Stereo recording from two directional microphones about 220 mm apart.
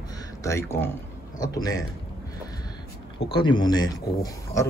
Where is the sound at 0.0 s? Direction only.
15° left (ahead or behind).